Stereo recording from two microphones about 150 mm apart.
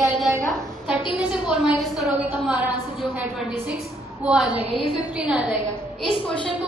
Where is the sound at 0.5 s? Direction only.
5° right (ahead or behind).